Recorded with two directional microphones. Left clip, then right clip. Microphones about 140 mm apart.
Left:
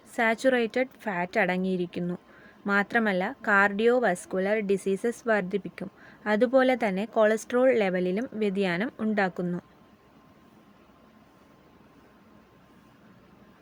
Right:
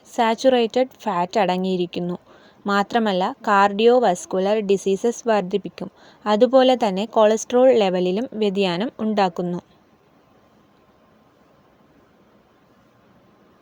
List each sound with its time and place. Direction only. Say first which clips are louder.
0.1 s speech: right 7 dB; 30° right (ahead or behind)